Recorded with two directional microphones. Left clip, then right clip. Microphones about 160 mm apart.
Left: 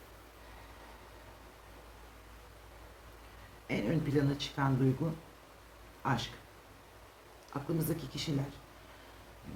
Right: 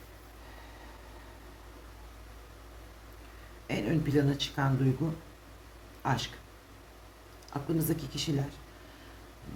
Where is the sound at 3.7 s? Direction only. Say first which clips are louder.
Right 3 dB; 45° right (ahead or behind).